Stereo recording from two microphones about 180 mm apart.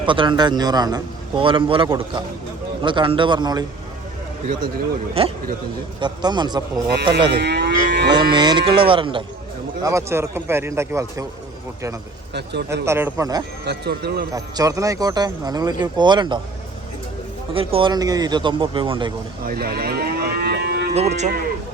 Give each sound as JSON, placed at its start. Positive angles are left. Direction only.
{"t": 0.0, "sound": "speech", "side_deg": -30}
{"t": 6.0, "sound": "speech", "side_deg": -25}
{"t": 7.3, "sound": "livestock", "side_deg": -70}
{"t": 8.1, "sound": "speech", "side_deg": -25}
{"t": 9.8, "sound": "a man's voice", "side_deg": -15}
{"t": 12.3, "sound": "speech", "side_deg": -70}
{"t": 12.8, "sound": "a man's voice", "side_deg": -15}
{"t": 13.7, "sound": "speech", "side_deg": -65}
{"t": 14.3, "sound": "speech", "side_deg": -20}
{"t": 17.5, "sound": "speech", "side_deg": -30}
{"t": 19.5, "sound": "moo", "side_deg": -55}
{"t": 20.9, "sound": "speech", "side_deg": -40}